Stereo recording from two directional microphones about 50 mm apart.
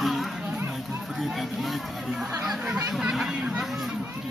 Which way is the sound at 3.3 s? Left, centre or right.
Centre.